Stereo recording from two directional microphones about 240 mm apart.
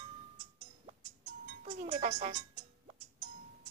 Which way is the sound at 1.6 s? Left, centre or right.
Right.